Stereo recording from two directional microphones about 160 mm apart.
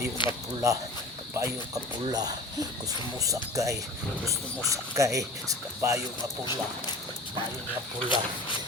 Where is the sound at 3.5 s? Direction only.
20° right (ahead or behind).